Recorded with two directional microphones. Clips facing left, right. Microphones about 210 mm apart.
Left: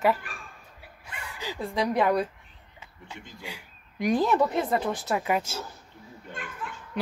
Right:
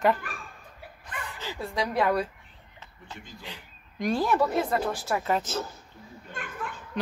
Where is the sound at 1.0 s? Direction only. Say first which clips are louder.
Even; 15° left (ahead or behind).